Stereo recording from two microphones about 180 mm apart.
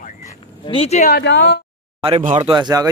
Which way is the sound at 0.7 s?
35° left (ahead or behind).